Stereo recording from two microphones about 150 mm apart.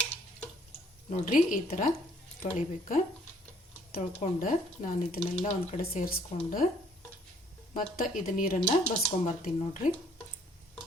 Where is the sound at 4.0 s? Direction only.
55° left (ahead or behind).